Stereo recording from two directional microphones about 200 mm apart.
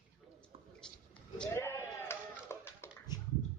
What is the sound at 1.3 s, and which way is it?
Sheep, 10° left (ahead or behind).